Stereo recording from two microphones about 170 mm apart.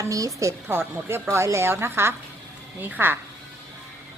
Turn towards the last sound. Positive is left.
turn(degrees=-10)  # may be behind; listen again after turning